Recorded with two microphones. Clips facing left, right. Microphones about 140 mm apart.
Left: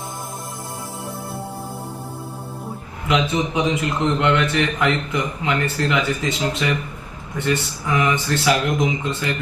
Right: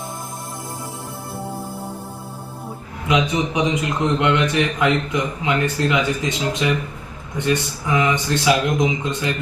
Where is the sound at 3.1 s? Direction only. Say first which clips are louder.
Right 1 dB; 15° right (ahead or behind).